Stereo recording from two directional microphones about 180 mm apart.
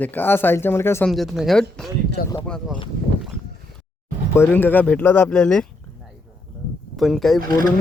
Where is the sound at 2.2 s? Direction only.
60° left (ahead or behind).